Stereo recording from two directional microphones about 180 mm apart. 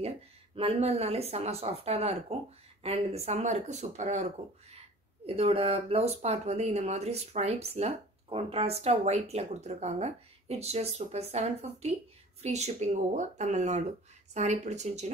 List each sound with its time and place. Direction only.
0.6 s speech: 35° right (ahead or behind)